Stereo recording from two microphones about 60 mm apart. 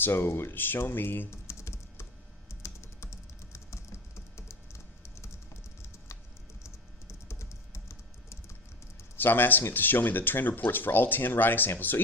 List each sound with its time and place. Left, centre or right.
0.0 s speech: left
1.5 s typing: left
7.1 s typing: left
9.1 s speech: left